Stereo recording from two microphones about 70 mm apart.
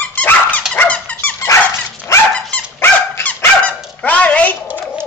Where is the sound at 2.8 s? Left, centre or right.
Left.